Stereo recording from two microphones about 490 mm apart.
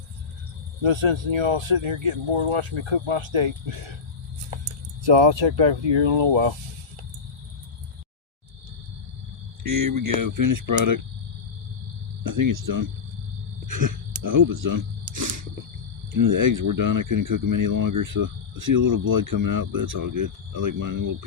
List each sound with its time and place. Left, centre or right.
0.8 s speech: right
4.5 s keys jangling: right
5.0 s speech: right
9.6 s speech: right
12.2 s speech: right